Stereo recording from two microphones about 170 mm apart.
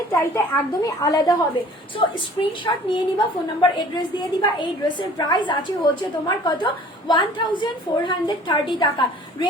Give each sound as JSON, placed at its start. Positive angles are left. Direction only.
{"t": 0.1, "sound": "a woman's voice", "side_deg": 15}